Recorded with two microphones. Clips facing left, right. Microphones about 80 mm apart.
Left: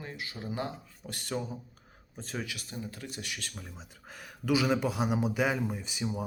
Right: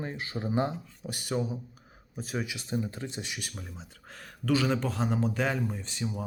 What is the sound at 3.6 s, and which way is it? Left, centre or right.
Speech, centre.